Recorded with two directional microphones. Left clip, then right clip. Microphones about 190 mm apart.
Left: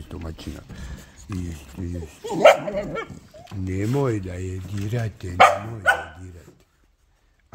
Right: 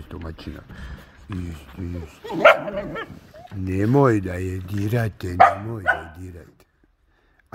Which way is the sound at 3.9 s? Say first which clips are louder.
Right 8 dB; 50° right (ahead or behind).